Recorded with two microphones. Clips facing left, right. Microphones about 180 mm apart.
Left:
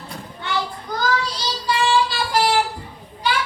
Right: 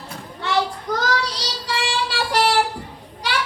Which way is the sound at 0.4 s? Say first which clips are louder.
Right 4 dB; 80° right.